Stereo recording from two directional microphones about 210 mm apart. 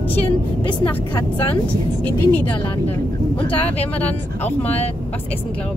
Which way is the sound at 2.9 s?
10° left (ahead or behind).